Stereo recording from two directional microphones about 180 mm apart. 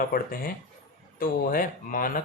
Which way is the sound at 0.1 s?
55° left (ahead or behind).